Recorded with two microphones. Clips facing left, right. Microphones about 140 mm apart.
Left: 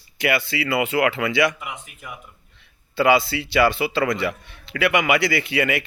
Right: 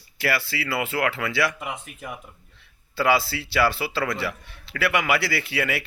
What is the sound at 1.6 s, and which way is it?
Speech, 35° right (ahead or behind).